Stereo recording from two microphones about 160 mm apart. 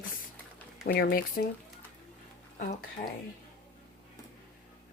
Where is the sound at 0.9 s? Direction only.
80° left.